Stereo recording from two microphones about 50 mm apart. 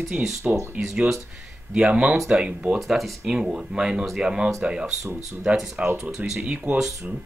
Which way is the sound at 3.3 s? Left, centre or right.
Centre.